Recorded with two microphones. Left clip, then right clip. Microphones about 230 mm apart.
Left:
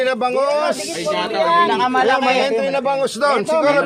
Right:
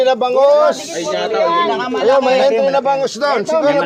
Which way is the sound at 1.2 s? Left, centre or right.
Left.